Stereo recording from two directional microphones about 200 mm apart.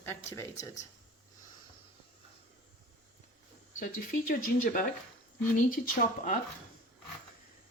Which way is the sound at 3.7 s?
45° left (ahead or behind).